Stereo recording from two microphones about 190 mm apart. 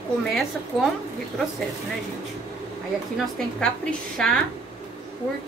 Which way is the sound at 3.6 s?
5° left (ahead or behind).